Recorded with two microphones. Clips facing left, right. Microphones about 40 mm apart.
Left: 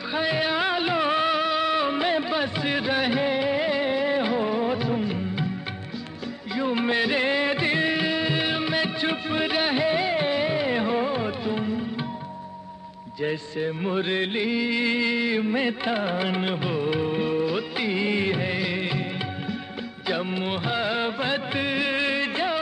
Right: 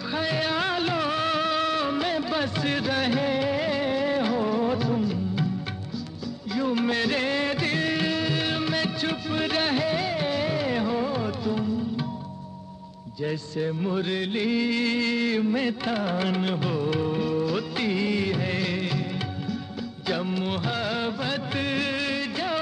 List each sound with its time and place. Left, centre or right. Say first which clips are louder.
0.1 s music of bollywood: left 2 dB; centre
6.5 s music of bollywood: left 1 dB; left
13.2 s music: left 1 dB; left
14.4 s music of bollywood: even; centre